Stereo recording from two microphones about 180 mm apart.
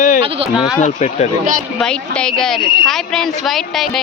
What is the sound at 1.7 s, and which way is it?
Speech, 5° left (ahead or behind).